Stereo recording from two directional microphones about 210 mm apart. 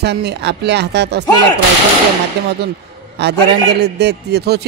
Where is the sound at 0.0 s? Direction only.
55° right (ahead or behind).